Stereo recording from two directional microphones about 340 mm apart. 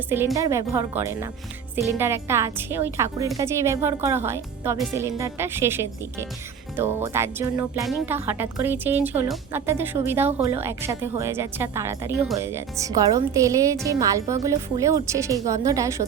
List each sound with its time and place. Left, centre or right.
0.1 s speech: centre
10.2 s speech: centre
10.5 s speech: centre